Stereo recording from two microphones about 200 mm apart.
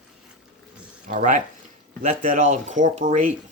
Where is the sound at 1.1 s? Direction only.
40° right (ahead or behind).